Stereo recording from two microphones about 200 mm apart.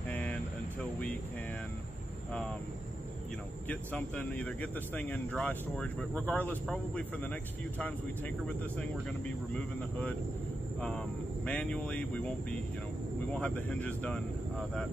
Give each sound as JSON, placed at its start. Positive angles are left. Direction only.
{"t": 0.1, "sound": "vehicle", "side_deg": 5}
{"t": 3.6, "sound": "speech", "side_deg": 5}
{"t": 8.7, "sound": "speech", "side_deg": 5}